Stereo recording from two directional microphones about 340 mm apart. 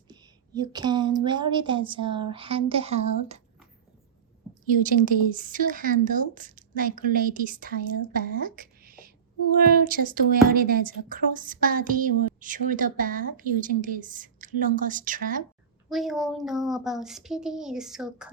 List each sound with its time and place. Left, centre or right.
0.1 s a woman's voice: centre
5.0 s a woman's voice: right
15.9 s speech: centre